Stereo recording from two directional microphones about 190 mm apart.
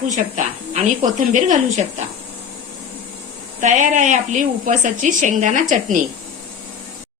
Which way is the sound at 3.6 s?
40° right (ahead or behind).